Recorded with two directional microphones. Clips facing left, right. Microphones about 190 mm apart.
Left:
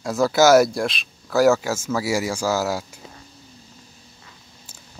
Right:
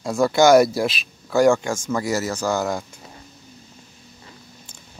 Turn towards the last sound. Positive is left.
turn(degrees=5)  # may be behind; listen again after turning